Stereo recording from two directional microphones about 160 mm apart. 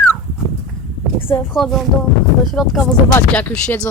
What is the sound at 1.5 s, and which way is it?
Speech, centre (ahead or behind).